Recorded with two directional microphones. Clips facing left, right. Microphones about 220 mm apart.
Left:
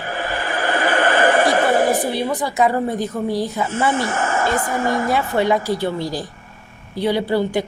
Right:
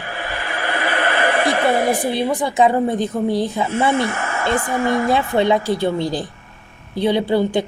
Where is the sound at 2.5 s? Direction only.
25° right (ahead or behind).